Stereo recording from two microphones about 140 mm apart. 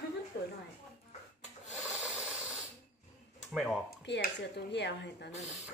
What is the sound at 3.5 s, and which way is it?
Speech, 5° right (ahead or behind).